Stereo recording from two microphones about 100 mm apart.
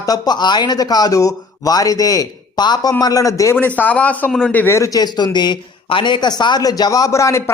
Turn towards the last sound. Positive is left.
turn(degrees=30)  # may be behind; listen again after turning